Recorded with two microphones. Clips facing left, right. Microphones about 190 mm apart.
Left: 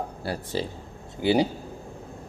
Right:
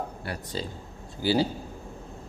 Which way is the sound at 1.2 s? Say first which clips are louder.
Left 3 dB; 20° left (ahead or behind).